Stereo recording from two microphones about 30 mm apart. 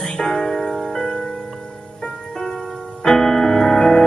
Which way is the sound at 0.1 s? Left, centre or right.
Left.